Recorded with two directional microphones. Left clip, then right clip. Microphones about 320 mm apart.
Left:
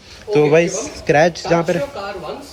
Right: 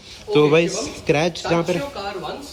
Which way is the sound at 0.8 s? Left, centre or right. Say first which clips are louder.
Left 6 dB; centre.